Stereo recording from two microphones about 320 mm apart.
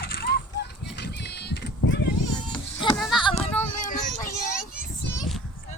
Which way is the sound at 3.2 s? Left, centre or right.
Centre.